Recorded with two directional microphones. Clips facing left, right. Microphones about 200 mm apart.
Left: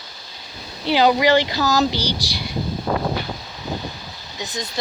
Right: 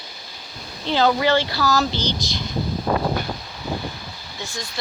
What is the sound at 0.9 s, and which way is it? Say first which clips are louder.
Speech: left 3 dB; 15° left (ahead or behind).